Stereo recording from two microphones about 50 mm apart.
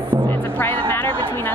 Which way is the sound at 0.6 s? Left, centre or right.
Left.